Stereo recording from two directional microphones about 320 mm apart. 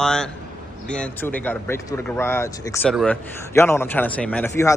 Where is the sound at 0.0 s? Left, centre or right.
Centre.